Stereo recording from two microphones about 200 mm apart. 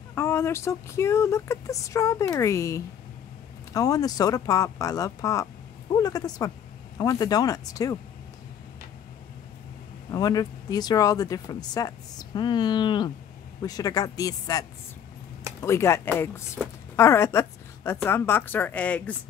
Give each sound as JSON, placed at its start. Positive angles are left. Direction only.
{"t": 0.1, "sound": "speech", "side_deg": 15}
{"t": 10.1, "sound": "speech", "side_deg": 20}